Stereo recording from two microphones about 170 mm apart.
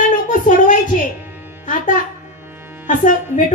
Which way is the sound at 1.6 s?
50° left (ahead or behind).